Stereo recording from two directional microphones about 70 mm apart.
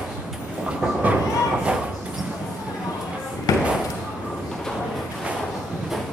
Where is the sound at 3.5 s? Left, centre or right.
Left.